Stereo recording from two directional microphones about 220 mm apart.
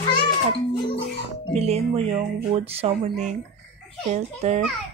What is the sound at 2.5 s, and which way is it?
A woman's voice, 25° right (ahead or behind).